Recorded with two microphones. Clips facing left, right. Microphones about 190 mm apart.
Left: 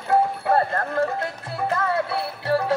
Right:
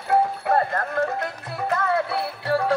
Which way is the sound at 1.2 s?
25° left (ahead or behind).